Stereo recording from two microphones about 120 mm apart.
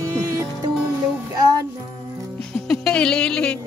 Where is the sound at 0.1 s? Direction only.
25° right (ahead or behind).